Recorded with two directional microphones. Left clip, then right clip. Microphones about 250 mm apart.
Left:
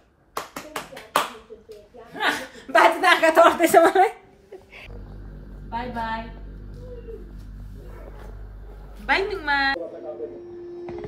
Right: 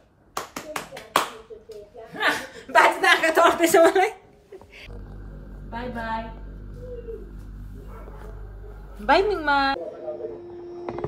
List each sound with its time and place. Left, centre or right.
2.1 s a sound: centre
5.7 s a woman's voice: centre
9.0 s a woman's voice: centre